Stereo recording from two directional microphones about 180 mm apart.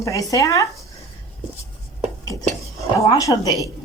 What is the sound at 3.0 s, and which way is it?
Speech, 20° left (ahead or behind).